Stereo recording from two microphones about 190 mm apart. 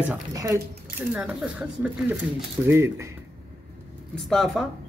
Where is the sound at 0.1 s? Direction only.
15° right (ahead or behind).